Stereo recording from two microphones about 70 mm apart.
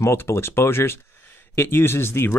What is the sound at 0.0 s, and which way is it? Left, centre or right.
Speech, left.